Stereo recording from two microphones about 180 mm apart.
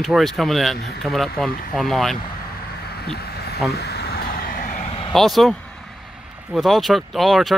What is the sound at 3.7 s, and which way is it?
Vehicle, 60° left (ahead or behind).